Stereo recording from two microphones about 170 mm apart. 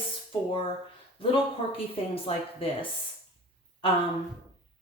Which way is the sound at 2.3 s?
35° left (ahead or behind).